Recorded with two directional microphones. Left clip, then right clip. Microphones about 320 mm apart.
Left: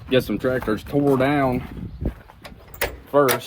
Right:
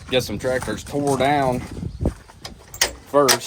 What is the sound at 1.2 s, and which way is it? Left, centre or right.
Speech, centre.